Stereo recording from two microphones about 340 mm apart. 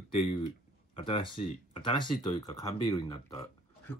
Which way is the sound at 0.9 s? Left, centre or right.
Centre.